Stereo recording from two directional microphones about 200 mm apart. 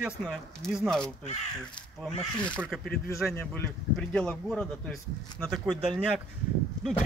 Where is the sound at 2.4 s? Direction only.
5° left (ahead or behind).